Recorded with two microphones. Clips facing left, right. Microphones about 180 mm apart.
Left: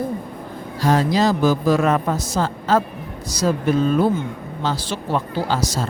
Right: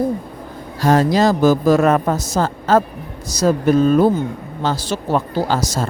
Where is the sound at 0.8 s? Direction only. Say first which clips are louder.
Right 4 dB; 45° right (ahead or behind).